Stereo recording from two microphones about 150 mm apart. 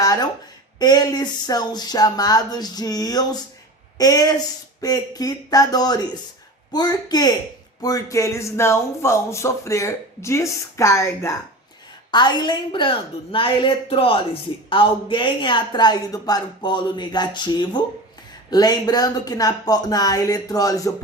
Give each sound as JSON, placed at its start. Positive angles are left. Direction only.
{"t": 0.0, "sound": "a sound", "side_deg": 25}
{"t": 0.8, "sound": "speech", "side_deg": 25}
{"t": 12.1, "sound": "a woman's voice", "side_deg": 30}